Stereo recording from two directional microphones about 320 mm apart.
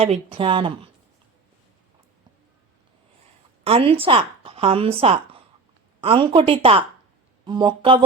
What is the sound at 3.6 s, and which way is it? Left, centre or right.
Speech, centre.